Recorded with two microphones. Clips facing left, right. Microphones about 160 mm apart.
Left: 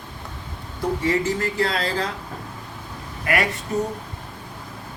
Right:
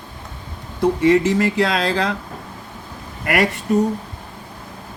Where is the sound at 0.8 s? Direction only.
80° right.